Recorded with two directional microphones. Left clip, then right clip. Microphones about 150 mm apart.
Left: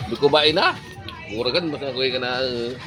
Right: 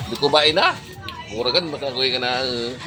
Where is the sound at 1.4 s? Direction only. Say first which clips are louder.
Right 2 dB; 60° left (ahead or behind).